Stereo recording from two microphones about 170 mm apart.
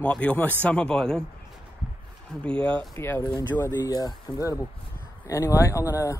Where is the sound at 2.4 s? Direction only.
5° left (ahead or behind).